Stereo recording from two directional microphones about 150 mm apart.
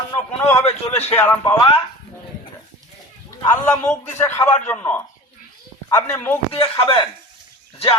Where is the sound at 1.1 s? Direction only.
15° left (ahead or behind).